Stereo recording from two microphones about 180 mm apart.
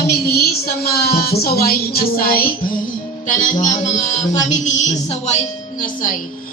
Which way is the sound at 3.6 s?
40° left (ahead or behind).